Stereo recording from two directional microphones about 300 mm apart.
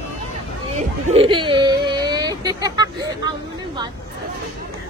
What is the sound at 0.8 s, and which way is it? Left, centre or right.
Speech, centre.